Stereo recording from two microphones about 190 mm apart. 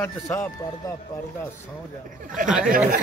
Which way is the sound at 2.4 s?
45° right (ahead or behind).